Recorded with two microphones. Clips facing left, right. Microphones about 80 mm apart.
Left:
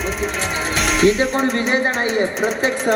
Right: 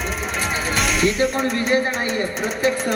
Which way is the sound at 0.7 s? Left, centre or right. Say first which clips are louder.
Left 2 dB; centre.